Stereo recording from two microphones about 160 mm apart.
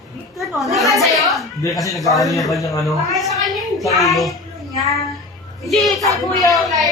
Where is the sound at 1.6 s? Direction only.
20° left (ahead or behind).